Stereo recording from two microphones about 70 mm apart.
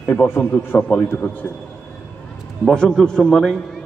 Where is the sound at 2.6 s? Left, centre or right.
Centre.